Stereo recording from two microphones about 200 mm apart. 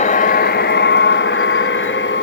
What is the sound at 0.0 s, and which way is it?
Vehicle, 40° left (ahead or behind).